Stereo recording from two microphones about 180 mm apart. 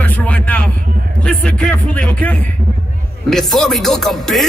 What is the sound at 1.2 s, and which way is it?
Speech, 5° left (ahead or behind).